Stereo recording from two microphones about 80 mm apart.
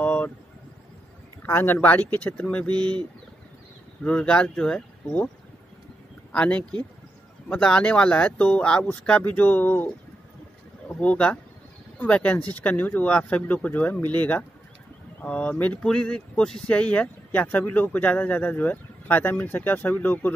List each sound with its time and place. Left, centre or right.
0.0 s a sound: left
1.4 s speech: left
4.0 s speech: centre
6.3 s speech: centre
10.9 s speech: centre